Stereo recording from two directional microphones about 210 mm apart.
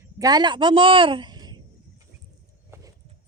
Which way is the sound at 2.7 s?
10° right (ahead or behind).